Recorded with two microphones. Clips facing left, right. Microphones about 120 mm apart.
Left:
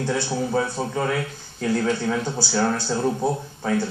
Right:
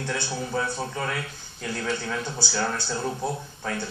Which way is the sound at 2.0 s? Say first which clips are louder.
Left 6 dB; 40° left (ahead or behind).